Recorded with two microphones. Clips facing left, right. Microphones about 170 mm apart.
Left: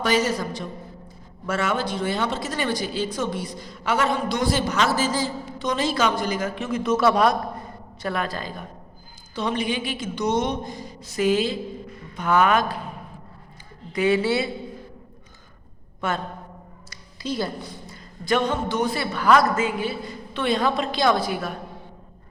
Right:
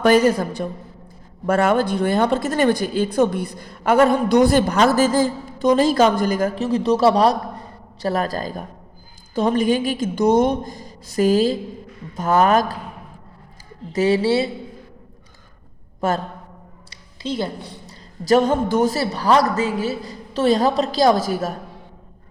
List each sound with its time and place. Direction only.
0.0 s a woman's voice: 50° right (ahead or behind)
6.7 s a woman's voice: 35° right (ahead or behind)
13.9 s a woman's voice: 35° right (ahead or behind)
16.0 s a man's voice: 40° right (ahead or behind)
16.9 s a sound: 25° right (ahead or behind)
18.3 s a woman's voice: 45° right (ahead or behind)